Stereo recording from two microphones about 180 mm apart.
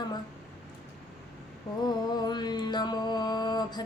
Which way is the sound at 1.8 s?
25° left (ahead or behind).